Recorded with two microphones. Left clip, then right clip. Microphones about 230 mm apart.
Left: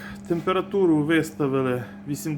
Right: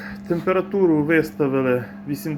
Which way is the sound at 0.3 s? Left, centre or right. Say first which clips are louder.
Right 3 dB; centre.